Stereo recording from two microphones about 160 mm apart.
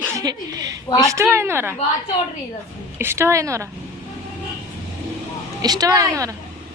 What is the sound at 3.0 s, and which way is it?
Speech, 15° right (ahead or behind).